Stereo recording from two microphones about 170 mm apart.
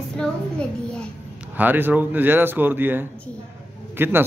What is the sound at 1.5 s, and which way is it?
A man's voice, 10° right (ahead or behind).